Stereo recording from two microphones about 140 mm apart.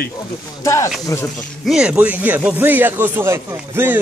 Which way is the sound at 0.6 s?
20° left (ahead or behind).